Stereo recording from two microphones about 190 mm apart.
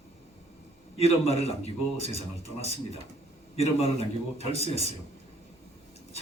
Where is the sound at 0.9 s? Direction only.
30° left (ahead or behind).